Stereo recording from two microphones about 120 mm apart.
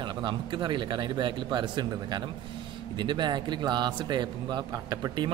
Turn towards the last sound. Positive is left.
turn(degrees=-30)  # may be behind; listen again after turning